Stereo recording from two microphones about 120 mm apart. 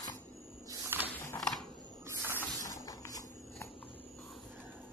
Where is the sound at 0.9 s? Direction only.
20° right (ahead or behind).